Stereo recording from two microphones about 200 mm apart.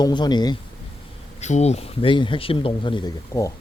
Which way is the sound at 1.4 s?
35° left (ahead or behind).